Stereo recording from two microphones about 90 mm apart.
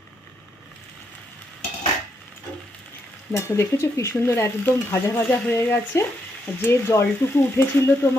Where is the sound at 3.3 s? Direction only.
30° left (ahead or behind).